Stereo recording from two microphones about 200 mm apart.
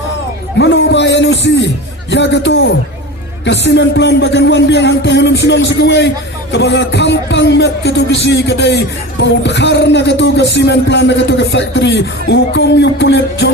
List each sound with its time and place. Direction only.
0.6 s a man's voice: 60° left (ahead or behind)